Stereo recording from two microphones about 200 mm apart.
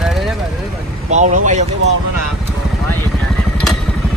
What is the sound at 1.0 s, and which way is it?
Speech, 35° right (ahead or behind).